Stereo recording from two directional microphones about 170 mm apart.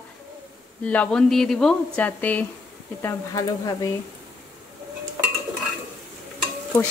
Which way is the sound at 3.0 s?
20° left (ahead or behind).